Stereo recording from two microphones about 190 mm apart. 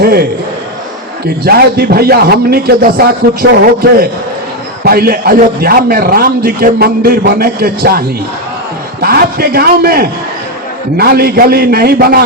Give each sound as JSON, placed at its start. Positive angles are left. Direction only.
{"t": 0.0, "sound": "a man's voice", "side_deg": -55}
{"t": 1.5, "sound": "a man's voice", "side_deg": -55}
{"t": 4.8, "sound": "a man's voice", "side_deg": -50}